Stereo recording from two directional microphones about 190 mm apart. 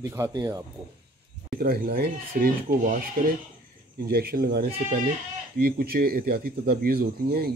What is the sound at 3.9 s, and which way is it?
Speech, 55° right (ahead or behind).